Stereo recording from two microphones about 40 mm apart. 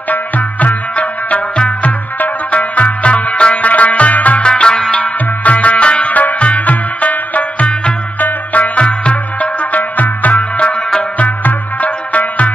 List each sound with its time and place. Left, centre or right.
0.1 s music: left
4.4 s music: left
9.1 s music: left